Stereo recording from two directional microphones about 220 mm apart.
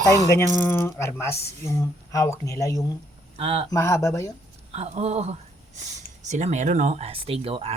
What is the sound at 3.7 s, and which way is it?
Speech, 10° left (ahead or behind).